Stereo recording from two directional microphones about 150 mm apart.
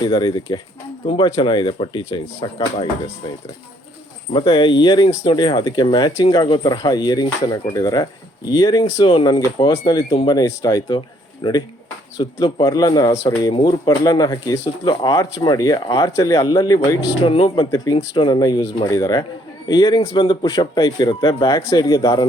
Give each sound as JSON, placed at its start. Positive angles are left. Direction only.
{"t": 0.0, "sound": "speech", "side_deg": 30}
{"t": 4.3, "sound": "speech", "side_deg": 30}
{"t": 8.8, "sound": "speech", "side_deg": 40}
{"t": 11.4, "sound": "speech", "side_deg": 35}